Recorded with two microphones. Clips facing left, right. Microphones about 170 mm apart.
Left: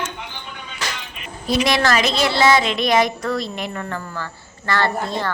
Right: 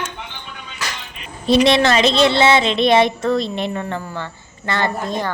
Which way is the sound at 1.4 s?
25° right (ahead or behind).